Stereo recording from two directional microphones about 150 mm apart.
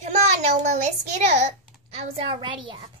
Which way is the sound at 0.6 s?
55° right (ahead or behind).